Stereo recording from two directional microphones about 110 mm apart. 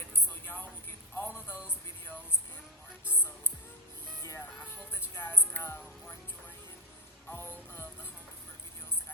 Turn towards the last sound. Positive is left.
turn(degrees=20)  # may be behind; listen again after turning